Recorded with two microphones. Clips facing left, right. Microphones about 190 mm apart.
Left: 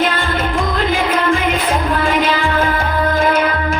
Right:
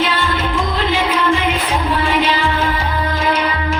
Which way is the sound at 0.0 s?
50° left (ahead or behind).